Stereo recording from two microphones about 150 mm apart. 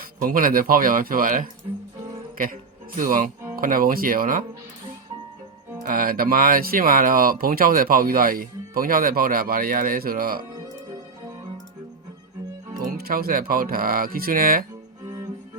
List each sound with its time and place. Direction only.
0.0 s a man's voice: 70° right (ahead or behind)
5.8 s speech: 75° right (ahead or behind)
13.0 s speech: 85° right
15.0 s music: 25° right (ahead or behind)